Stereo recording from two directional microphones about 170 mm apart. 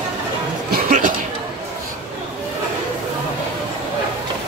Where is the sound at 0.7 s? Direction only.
60° right (ahead or behind).